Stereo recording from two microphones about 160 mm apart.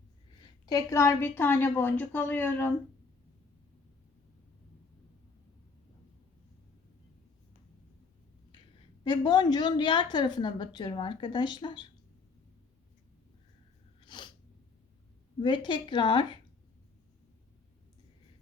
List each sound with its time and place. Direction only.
0.6 s a woman's voice: 25° left (ahead or behind)
9.0 s a woman's voice: 25° left (ahead or behind)
14.1 s sneeze: 30° left (ahead or behind)
15.4 s a woman's voice: 30° left (ahead or behind)